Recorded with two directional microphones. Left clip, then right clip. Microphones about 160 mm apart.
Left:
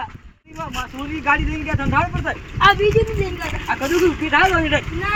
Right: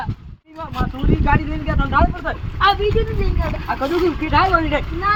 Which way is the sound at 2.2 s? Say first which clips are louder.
Left 2 dB; 5° left (ahead or behind).